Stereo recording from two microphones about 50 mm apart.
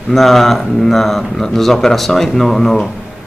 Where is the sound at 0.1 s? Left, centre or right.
Centre.